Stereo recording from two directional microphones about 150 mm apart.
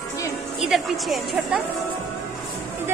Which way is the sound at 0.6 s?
Centre (ahead or behind).